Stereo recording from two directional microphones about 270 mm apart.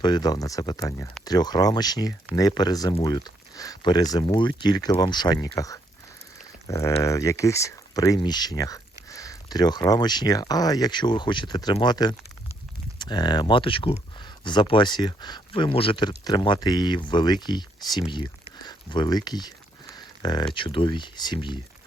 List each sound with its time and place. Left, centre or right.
0.0 s speech: centre